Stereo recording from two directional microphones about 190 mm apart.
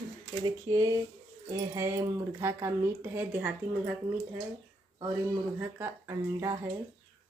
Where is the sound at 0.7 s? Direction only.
20° right (ahead or behind).